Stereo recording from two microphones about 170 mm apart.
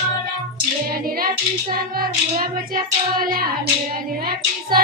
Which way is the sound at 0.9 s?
60° right (ahead or behind).